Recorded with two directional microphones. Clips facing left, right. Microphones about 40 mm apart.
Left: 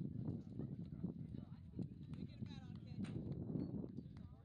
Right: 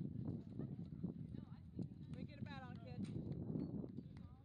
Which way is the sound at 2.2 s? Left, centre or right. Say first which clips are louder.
Right 3 dB; right.